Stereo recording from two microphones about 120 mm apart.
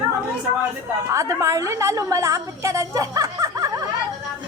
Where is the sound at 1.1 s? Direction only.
25° right (ahead or behind).